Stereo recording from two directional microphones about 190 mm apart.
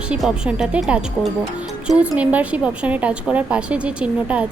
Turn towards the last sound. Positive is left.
turn(degrees=-5)  # may be behind; listen again after turning